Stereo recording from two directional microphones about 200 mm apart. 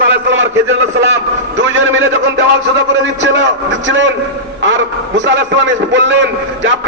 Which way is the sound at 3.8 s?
65° right (ahead or behind).